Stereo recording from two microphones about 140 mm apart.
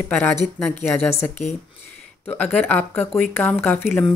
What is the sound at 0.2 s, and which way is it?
Speech, 15° left (ahead or behind).